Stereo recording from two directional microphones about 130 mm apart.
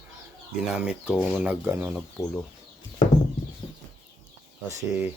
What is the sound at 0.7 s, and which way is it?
Speech, 10° right (ahead or behind).